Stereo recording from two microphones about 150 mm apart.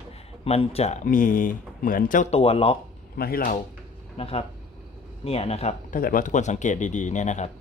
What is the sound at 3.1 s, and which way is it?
Speech, 85° left.